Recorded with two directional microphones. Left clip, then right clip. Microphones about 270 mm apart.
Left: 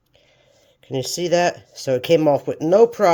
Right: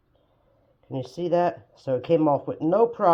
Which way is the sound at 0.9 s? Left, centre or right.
Left.